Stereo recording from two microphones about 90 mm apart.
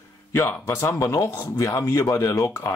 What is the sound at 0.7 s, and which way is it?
Speech, 35° left (ahead or behind).